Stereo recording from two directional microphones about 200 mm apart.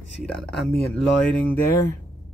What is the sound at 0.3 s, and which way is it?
Speech, centre (ahead or behind).